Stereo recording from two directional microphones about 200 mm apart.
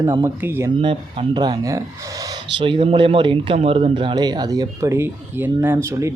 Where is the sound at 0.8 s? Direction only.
25° right (ahead or behind).